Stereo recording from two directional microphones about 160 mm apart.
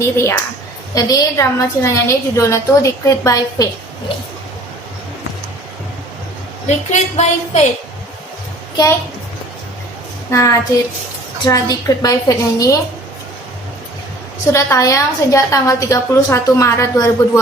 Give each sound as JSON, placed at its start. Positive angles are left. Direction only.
{"t": 0.0, "sound": "a woman's voice", "side_deg": 15}
{"t": 6.7, "sound": "a woman's voice", "side_deg": 45}
{"t": 10.3, "sound": "a woman's voice", "side_deg": 20}
{"t": 14.5, "sound": "a woman's voice", "side_deg": 20}